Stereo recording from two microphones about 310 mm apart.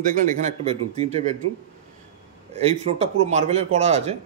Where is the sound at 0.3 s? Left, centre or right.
Right.